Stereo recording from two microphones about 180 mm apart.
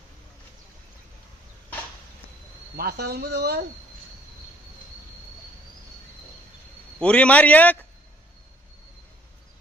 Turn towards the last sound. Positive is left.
turn(degrees=10)  # may be behind; listen again after turning